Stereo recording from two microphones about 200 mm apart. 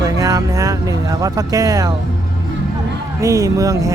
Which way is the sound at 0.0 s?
15° right (ahead or behind).